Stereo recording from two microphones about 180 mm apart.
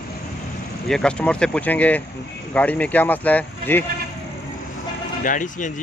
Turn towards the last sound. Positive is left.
turn(degrees=45)  # may be behind; listen again after turning